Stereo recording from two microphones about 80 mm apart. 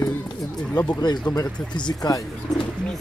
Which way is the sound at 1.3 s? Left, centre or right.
Left.